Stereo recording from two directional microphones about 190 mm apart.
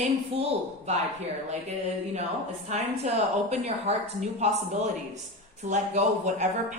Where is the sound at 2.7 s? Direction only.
35° right (ahead or behind).